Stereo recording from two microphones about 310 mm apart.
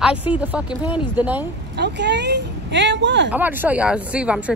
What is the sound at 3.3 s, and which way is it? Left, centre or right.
Speech, centre.